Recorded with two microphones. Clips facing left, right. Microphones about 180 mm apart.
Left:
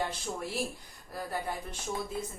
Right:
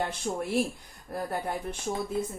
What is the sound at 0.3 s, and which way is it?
Speech, 40° right (ahead or behind).